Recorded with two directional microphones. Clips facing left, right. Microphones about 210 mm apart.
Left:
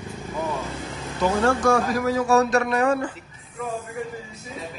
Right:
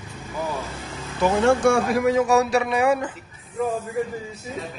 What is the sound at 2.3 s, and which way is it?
Speech, 15° right (ahead or behind).